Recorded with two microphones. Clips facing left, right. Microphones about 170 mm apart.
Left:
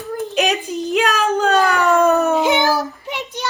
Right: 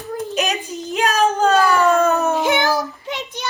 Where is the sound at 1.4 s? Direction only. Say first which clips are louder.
Right 1 dB; 65° left (ahead or behind).